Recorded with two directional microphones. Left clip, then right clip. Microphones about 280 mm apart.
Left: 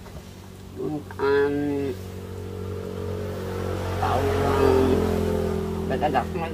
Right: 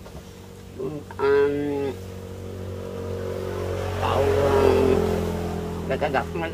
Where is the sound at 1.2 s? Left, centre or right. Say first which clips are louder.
Right 2 dB; centre.